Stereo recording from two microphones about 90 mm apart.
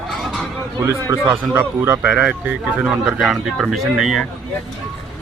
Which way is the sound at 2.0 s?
10° right (ahead or behind).